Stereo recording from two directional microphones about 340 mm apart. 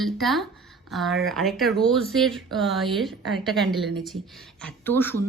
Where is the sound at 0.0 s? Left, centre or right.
Centre.